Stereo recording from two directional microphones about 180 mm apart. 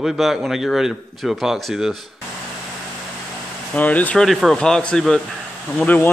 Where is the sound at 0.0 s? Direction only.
Centre (ahead or behind).